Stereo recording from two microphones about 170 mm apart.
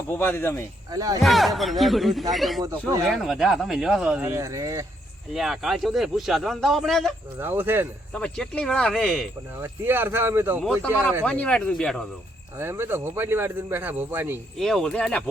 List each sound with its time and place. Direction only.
0.2 s speech: 10° left (ahead or behind)
0.9 s speech: 20° right (ahead or behind)
1.2 s speech: centre (ahead or behind); by 4.9 s 20° right (ahead or behind)
5.3 s speech: centre (ahead or behind)
7.3 s a man's voice: 10° right (ahead or behind)
8.1 s speech: 5° left (ahead or behind)
9.6 s a man's voice: 10° right (ahead or behind)
11.3 s speech: 5° left (ahead or behind)
12.5 s a man's voice: 15° right (ahead or behind)
14.6 s speech: centre (ahead or behind)